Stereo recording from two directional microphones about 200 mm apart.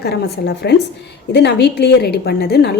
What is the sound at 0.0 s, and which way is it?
A woman's voice, 55° left (ahead or behind).